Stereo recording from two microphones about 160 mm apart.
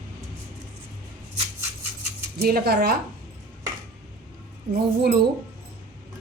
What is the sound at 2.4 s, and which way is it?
Speech, 70° right (ahead or behind).